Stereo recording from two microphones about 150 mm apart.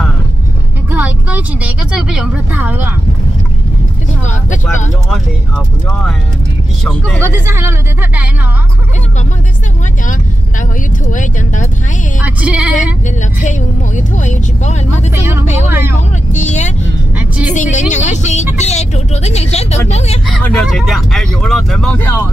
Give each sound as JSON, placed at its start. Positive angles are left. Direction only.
{"t": 0.9, "sound": "vehicle", "side_deg": -10}
{"t": 4.3, "sound": "speech", "side_deg": 55}
{"t": 5.9, "sound": "speech", "side_deg": 5}
{"t": 7.2, "sound": "speech", "side_deg": -15}
{"t": 11.1, "sound": "speech", "side_deg": 55}
{"t": 12.4, "sound": "speech", "side_deg": -5}
{"t": 13.4, "sound": "speech", "side_deg": 55}
{"t": 20.4, "sound": "speech", "side_deg": 0}
{"t": 21.9, "sound": "speech", "side_deg": 15}